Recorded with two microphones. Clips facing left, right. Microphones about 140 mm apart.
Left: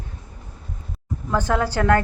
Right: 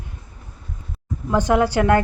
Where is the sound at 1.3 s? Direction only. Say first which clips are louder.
Right 4 dB; 15° right (ahead or behind).